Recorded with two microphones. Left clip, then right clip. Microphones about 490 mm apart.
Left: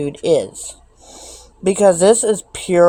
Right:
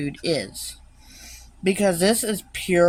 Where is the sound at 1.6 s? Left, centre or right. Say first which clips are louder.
Left 9 dB; right.